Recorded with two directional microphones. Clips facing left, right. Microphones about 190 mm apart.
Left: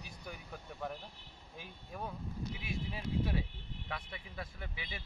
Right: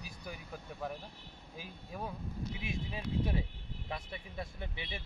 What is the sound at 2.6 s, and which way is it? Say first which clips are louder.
Speech: right 1 dB; 25° right (ahead or behind).